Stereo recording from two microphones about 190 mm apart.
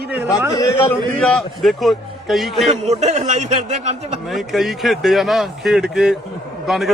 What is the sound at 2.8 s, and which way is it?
Speech, 35° right (ahead or behind).